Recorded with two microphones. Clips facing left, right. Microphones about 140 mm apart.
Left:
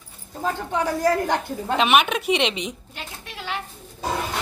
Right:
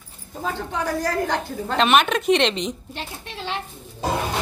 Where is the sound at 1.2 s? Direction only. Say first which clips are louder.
Even; 10° left (ahead or behind).